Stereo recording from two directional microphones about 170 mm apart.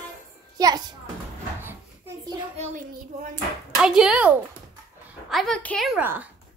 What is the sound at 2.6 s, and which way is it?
Speech, 45° right (ahead or behind).